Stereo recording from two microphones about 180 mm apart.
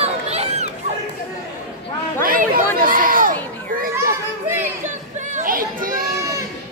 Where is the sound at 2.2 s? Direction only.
55° right (ahead or behind).